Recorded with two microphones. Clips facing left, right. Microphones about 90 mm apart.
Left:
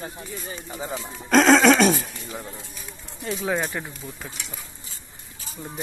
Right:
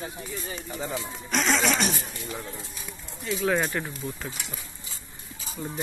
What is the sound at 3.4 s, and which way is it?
Speech, 10° left (ahead or behind).